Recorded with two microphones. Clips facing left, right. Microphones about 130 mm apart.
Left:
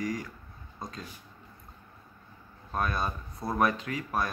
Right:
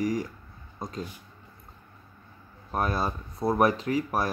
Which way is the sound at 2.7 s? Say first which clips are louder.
Right 3 dB; 30° right (ahead or behind).